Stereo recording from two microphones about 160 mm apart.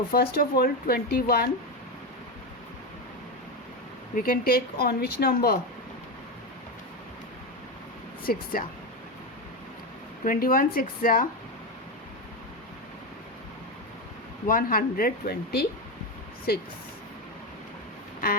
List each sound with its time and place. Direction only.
0.1 s speech: 75° left (ahead or behind)
4.1 s speech: 65° left (ahead or behind)
8.3 s speech: 65° left (ahead or behind)
10.2 s speech: 60° left (ahead or behind)
14.4 s speech: 60° left (ahead or behind)